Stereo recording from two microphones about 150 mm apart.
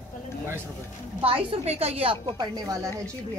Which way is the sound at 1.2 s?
35° right (ahead or behind).